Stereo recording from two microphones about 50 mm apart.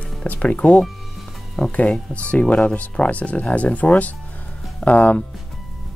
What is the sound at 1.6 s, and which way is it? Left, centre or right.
Speech, centre.